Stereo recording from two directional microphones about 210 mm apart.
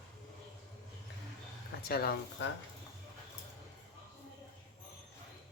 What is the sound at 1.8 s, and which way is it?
Speech, 45° left (ahead or behind).